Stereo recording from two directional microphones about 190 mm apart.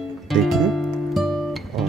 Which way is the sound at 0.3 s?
Centre (ahead or behind).